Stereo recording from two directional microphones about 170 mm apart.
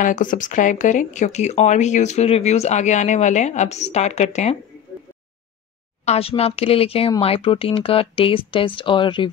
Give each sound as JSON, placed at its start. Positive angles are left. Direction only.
{"t": 0.0, "sound": "speech", "side_deg": 50}
{"t": 6.0, "sound": "speech", "side_deg": 35}